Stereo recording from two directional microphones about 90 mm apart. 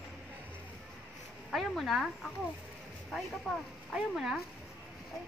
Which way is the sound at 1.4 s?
Centre (ahead or behind).